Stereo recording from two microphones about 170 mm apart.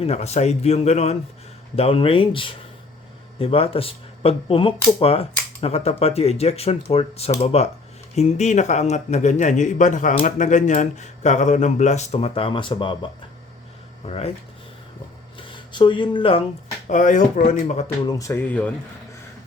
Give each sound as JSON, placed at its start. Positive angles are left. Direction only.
{"t": 0.0, "sound": "speech", "side_deg": 40}
{"t": 14.1, "sound": "speech", "side_deg": 35}
{"t": 15.4, "sound": "speech", "side_deg": 25}
{"t": 16.9, "sound": "speech", "side_deg": 50}
{"t": 17.8, "sound": "speech", "side_deg": 20}